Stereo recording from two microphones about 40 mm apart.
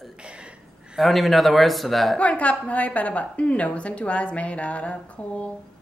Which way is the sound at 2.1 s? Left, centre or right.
Left.